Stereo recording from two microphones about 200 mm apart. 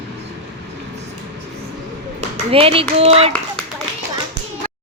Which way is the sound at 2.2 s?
30° right (ahead or behind).